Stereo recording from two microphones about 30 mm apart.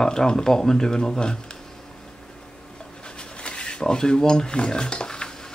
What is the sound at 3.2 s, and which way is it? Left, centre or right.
Dishes, left.